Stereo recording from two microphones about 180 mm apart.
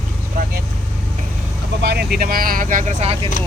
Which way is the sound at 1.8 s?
65° right (ahead or behind).